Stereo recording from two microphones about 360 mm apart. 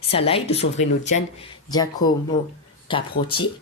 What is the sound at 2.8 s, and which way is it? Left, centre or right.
Speech, centre.